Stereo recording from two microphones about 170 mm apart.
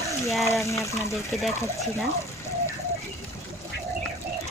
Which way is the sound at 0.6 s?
15° left (ahead or behind).